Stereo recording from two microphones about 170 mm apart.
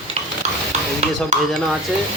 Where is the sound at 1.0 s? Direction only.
40° right (ahead or behind).